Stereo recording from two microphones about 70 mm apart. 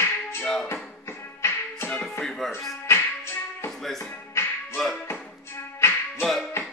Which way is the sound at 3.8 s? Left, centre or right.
Centre.